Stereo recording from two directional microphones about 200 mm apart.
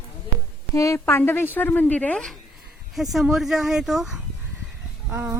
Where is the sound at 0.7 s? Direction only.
15° left (ahead or behind).